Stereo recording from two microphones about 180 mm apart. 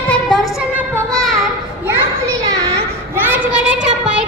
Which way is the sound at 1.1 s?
Centre (ahead or behind).